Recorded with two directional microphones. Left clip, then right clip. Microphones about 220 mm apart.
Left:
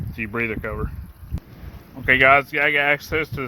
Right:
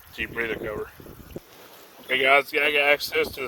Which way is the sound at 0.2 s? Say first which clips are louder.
Left 3 dB; 15° right (ahead or behind).